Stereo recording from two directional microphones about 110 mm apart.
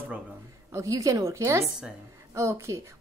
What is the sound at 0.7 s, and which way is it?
Speech, 30° right (ahead or behind).